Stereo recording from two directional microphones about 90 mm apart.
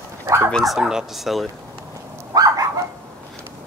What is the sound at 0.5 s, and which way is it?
Speech, centre (ahead or behind).